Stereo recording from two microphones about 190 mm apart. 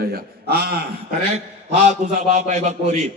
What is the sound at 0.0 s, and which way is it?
Speech, 55° right (ahead or behind).